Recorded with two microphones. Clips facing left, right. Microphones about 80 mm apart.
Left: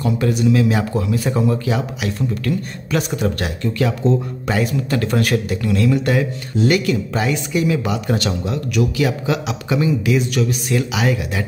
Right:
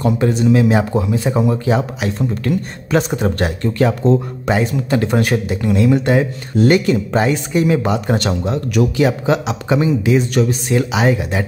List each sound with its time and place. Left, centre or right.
0.2 s speech: right
1.7 s speech: right
4.5 s speech: right